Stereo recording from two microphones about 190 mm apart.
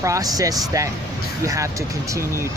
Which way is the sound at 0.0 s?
15° right (ahead or behind).